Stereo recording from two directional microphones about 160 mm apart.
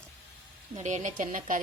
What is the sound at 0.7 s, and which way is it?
Speech, 50° right (ahead or behind).